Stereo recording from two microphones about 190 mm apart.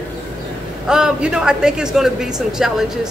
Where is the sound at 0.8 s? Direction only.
5° right (ahead or behind).